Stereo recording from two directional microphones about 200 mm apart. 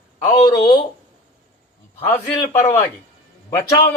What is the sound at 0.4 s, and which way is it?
Speech, 20° left (ahead or behind).